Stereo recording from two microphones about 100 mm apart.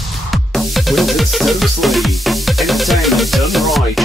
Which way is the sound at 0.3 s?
Centre (ahead or behind).